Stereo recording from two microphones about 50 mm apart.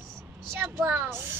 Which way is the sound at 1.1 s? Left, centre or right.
Right.